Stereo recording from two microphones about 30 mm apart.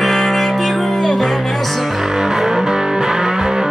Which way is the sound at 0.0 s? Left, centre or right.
Centre.